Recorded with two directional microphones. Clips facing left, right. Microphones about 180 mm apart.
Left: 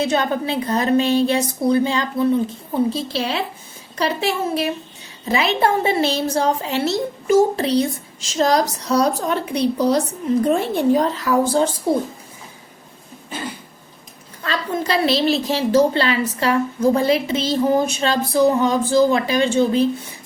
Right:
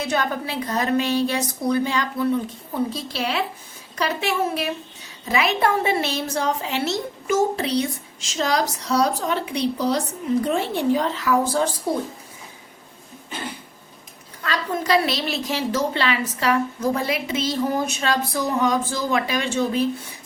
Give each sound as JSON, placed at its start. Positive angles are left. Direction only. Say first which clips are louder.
{"t": 0.0, "sound": "a woman's voice", "louder": "left 5 dB", "side_deg": 25}
{"t": 14.4, "sound": "a woman's voice", "louder": "left 2 dB", "side_deg": 30}